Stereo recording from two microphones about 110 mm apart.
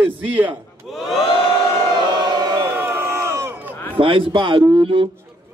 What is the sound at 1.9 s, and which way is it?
Choir, 40° right (ahead or behind).